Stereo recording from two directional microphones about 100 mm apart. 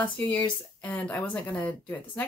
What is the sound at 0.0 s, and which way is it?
Speech, 15° left (ahead or behind).